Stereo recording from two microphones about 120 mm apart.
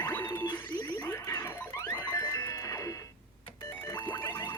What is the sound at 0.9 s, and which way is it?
Music, 15° left (ahead or behind).